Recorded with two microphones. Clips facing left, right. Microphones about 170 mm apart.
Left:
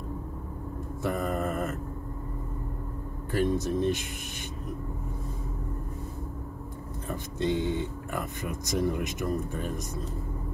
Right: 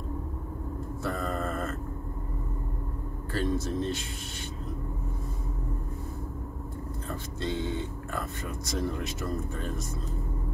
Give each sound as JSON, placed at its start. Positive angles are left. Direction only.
{"t": 1.0, "sound": "vehicle", "side_deg": 15}
{"t": 3.3, "sound": "speech", "side_deg": 15}
{"t": 7.1, "sound": "speech", "side_deg": 15}